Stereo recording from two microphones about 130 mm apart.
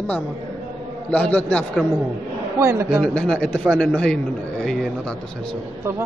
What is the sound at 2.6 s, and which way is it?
Speech, 20° right (ahead or behind).